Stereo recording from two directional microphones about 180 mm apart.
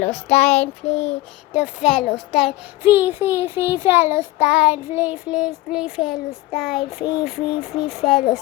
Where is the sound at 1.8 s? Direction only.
5° right (ahead or behind).